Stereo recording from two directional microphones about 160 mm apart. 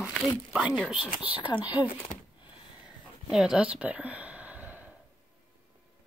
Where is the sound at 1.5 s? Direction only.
25° left (ahead or behind).